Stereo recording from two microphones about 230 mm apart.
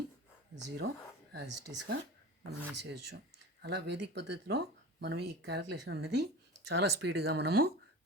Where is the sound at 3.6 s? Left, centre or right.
Right.